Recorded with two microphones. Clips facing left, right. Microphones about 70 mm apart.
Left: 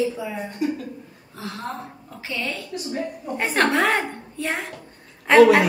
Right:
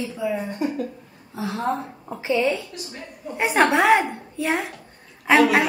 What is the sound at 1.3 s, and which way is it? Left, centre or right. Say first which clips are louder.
A woman's voice: right 7 dB; centre.